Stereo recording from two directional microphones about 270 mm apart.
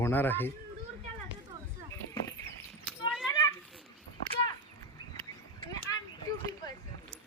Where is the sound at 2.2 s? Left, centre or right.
Centre.